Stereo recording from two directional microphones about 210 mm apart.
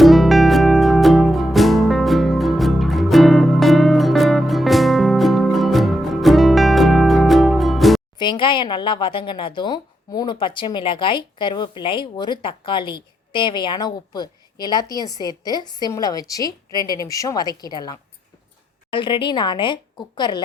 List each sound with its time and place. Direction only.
0.0 s music: centre (ahead or behind)
8.2 s speech: 20° left (ahead or behind)